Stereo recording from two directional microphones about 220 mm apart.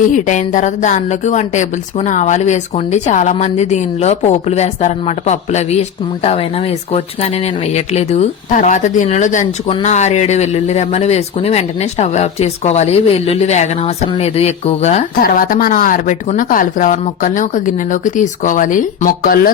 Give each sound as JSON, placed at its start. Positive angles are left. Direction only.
{"t": 0.1, "sound": "speech", "side_deg": 35}